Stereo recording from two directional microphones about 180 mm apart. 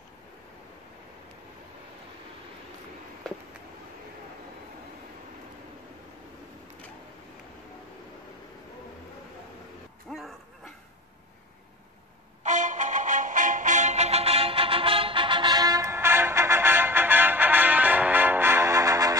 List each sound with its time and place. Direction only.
10.1 s dog: centre (ahead or behind)
12.4 s music: 45° right (ahead or behind); by 19.1 s 15° right (ahead or behind)